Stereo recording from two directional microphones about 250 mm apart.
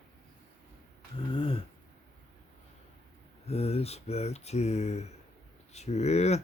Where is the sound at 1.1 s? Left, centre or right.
Left.